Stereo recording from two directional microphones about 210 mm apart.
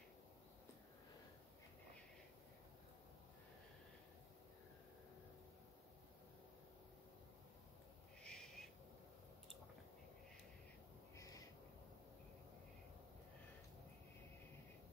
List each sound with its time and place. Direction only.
8.2 s owl: 5° left (ahead or behind)
11.1 s owl: 15° left (ahead or behind)